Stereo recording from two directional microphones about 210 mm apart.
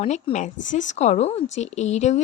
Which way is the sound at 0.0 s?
30° left (ahead or behind).